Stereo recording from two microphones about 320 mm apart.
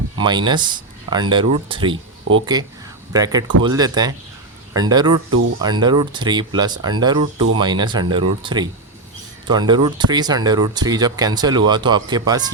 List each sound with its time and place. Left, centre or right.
0.2 s speech: centre
2.3 s speech: right
3.1 s speech: centre